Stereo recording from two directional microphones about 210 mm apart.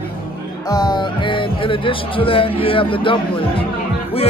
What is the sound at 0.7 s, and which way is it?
Speech, 20° left (ahead or behind).